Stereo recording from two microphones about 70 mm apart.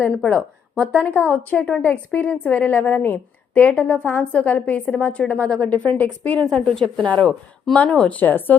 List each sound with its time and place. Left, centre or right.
0.3 s a woman's voice: centre
6.5 s a woman's voice: centre
7.1 s a woman's voice: centre